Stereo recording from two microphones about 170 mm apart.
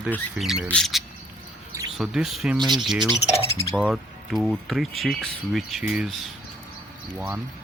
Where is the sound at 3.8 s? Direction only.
5° right (ahead or behind).